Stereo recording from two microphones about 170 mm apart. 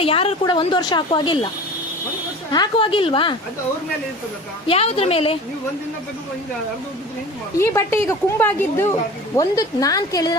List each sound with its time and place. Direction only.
0.0 s a woman's voice: 35° left (ahead or behind)
2.5 s a woman's voice: 25° left (ahead or behind)
4.6 s a woman's voice: 35° left (ahead or behind)
7.6 s a woman's voice: 15° left (ahead or behind)